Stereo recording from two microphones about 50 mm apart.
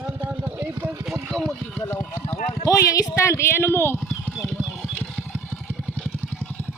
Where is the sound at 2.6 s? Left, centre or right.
Left.